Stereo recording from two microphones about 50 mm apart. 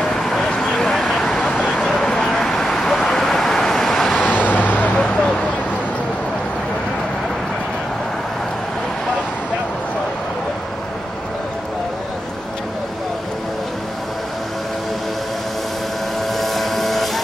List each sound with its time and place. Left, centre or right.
0.0 s vehicle: centre
4.3 s vehicle: left
16.3 s vehicle: centre